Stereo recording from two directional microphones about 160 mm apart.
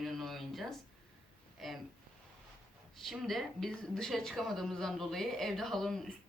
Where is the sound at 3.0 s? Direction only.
Centre (ahead or behind).